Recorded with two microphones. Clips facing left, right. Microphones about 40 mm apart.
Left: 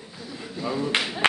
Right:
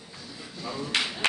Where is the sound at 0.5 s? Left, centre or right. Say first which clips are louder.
Left 5 dB; centre.